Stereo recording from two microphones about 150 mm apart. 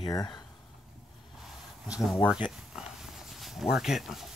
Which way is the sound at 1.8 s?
5° right (ahead or behind).